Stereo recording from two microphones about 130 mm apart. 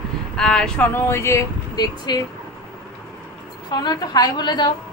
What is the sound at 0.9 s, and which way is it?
Speech, 20° left (ahead or behind).